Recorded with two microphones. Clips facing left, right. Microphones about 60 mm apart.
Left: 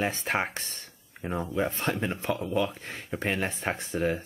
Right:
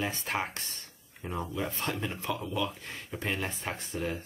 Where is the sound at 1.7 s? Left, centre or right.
Left.